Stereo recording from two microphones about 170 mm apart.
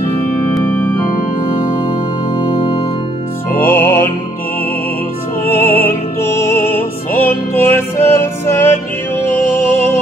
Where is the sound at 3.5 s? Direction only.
10° left (ahead or behind).